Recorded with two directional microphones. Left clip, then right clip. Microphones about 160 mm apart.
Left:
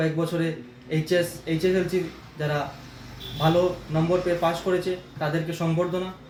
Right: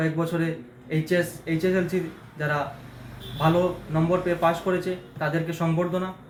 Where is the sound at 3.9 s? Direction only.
15° left (ahead or behind).